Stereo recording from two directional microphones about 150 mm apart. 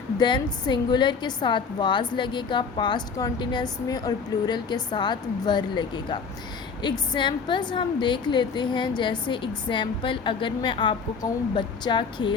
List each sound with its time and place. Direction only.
0.2 s a woman's voice: 30° left (ahead or behind)